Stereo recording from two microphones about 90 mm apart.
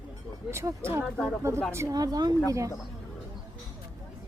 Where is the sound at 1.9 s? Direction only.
45° right (ahead or behind).